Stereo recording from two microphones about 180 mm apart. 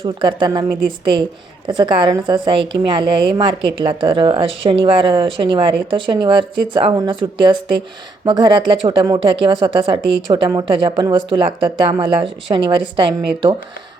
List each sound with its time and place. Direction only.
0.0 s speech: 25° right (ahead or behind)